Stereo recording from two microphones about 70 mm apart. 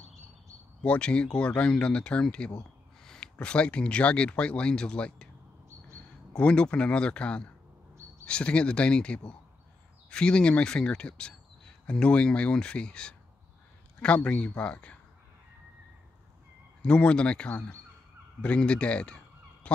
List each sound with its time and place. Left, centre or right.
0.8 s speech: centre
6.3 s speech: centre
16.8 s speech: centre